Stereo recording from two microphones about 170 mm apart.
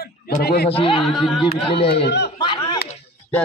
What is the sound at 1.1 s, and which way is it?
Speech, centre (ahead or behind).